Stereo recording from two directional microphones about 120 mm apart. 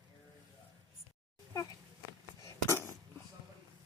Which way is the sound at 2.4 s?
25° left (ahead or behind).